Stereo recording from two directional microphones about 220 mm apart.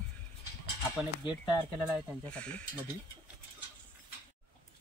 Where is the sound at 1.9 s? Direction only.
5° left (ahead or behind).